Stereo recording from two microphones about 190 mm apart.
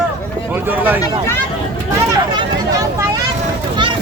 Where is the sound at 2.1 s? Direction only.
20° right (ahead or behind).